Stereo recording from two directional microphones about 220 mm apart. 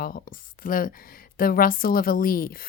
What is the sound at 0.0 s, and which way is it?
Speech, 40° left (ahead or behind).